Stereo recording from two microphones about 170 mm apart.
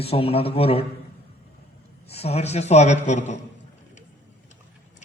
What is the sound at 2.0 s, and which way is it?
Speech, 35° left (ahead or behind).